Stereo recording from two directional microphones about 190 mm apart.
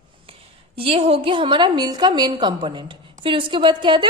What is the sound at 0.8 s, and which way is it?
A woman's voice, 30° right (ahead or behind).